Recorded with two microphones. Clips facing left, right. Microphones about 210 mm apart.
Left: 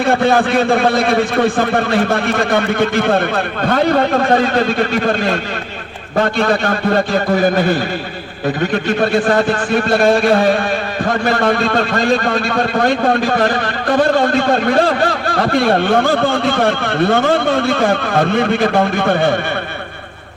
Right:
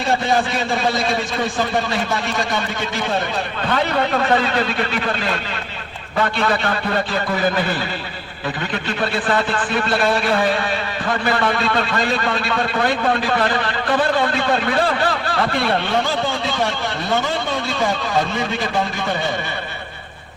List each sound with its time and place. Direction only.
0.0 s a man's voice: 55° left (ahead or behind)